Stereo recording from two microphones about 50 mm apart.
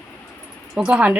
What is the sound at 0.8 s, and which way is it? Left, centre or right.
Speech, right.